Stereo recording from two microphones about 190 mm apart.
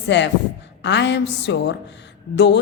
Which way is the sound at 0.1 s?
70° left (ahead or behind).